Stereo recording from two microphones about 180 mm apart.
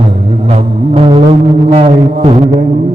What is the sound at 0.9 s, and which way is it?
Music, 30° right (ahead or behind).